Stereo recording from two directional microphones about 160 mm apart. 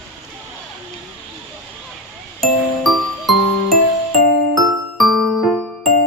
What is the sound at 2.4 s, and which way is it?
Music, centre (ahead or behind).